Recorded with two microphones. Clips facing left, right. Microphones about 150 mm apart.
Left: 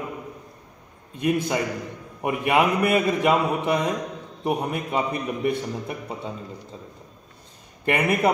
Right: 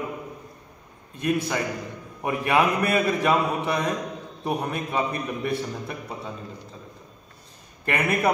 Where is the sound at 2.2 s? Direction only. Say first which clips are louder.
Left 1 dB; 15° left (ahead or behind).